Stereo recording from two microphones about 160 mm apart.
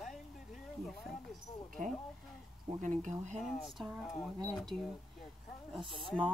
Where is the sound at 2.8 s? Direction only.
50° right (ahead or behind).